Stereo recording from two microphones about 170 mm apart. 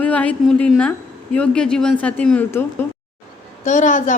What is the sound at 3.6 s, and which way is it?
Speech, 45° left (ahead or behind).